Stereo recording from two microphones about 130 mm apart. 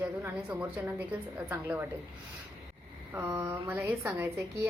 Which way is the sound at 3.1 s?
20° right (ahead or behind).